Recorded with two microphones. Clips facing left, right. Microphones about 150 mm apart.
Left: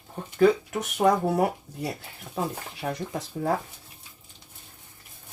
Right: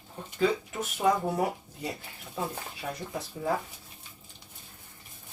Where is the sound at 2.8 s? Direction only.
55° left (ahead or behind).